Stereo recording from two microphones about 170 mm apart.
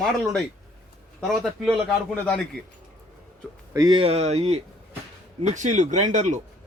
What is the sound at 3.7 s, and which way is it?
Speech, 25° right (ahead or behind).